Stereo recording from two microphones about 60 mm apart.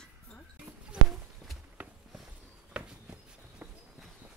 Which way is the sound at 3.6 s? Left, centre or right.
Right.